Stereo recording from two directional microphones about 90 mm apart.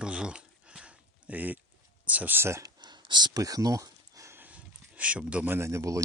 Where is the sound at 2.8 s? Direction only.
55° right (ahead or behind); by 4.4 s 35° right (ahead or behind).